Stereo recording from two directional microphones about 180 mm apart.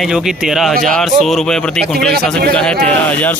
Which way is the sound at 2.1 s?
60° right (ahead or behind).